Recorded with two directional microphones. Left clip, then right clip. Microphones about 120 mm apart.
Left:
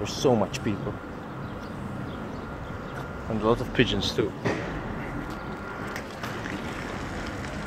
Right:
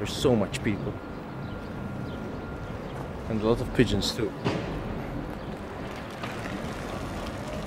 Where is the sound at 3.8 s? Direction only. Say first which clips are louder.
Left 1 dB; 30° right (ahead or behind).